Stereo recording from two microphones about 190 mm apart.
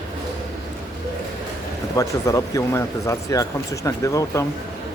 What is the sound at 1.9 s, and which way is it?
Speech, 15° left (ahead or behind).